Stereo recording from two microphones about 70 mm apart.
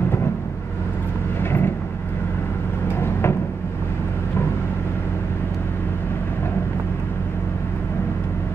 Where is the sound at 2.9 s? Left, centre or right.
Left.